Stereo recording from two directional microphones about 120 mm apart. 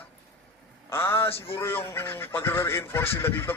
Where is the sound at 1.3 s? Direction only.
50° left (ahead or behind).